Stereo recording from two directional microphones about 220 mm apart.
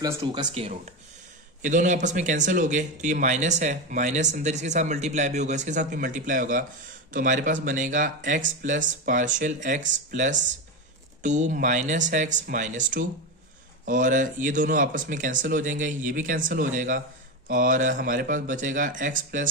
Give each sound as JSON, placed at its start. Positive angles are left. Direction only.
{"t": 0.0, "sound": "speech", "side_deg": -15}
{"t": 1.6, "sound": "speech", "side_deg": -35}